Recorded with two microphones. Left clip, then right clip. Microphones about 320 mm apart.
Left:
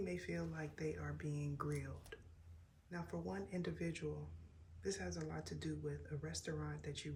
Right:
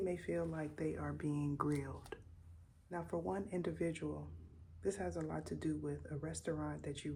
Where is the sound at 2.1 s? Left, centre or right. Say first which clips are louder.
Right 5 dB; centre.